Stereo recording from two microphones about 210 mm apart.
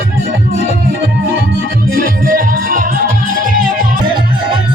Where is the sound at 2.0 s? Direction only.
40° right (ahead or behind).